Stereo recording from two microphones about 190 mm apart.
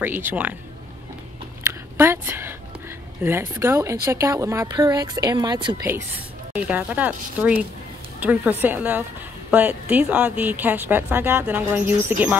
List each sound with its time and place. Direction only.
0.3 s speech: 10° right (ahead or behind)
1.6 s a sound: 10° right (ahead or behind)
3.2 s speech: 10° right (ahead or behind)
6.5 s speech: 10° right (ahead or behind)